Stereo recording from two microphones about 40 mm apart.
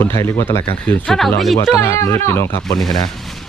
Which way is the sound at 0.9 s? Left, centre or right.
Left.